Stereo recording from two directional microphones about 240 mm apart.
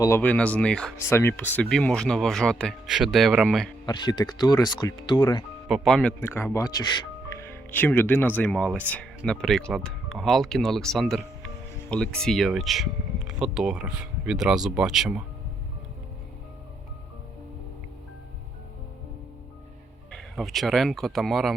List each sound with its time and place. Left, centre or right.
0.0 s speech: centre
3.8 s speech: centre
5.6 s speech: centre
20.1 s speech: centre